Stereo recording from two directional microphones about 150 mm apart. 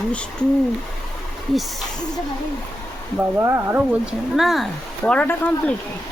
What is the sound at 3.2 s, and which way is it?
Speech, 20° right (ahead or behind).